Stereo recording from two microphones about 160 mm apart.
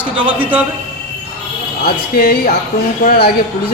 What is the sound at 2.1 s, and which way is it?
Speech, 70° left (ahead or behind).